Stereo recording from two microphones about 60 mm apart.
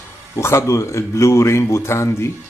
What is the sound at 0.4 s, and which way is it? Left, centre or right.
Speech, left.